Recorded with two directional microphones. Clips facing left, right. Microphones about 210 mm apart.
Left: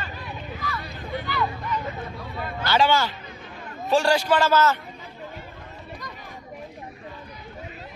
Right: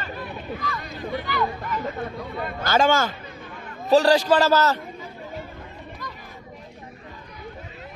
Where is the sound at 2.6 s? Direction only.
45° right (ahead or behind).